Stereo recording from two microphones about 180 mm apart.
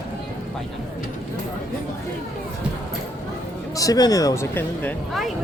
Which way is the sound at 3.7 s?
20° left (ahead or behind).